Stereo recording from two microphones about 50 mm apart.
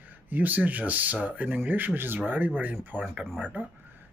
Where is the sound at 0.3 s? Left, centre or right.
Right.